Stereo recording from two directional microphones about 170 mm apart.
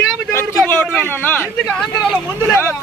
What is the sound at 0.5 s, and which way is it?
Speech, 10° left (ahead or behind).